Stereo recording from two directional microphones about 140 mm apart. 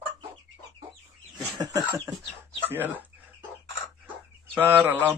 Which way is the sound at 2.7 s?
15° right (ahead or behind).